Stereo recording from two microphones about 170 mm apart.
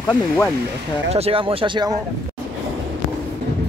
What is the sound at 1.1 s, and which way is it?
Speech, 35° right (ahead or behind).